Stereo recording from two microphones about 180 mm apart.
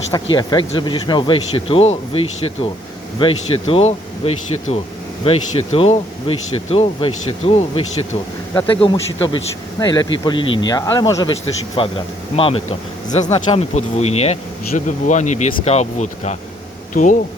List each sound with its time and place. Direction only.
0.3 s speech: 25° left (ahead or behind); by 17.2 s 45° left (ahead or behind)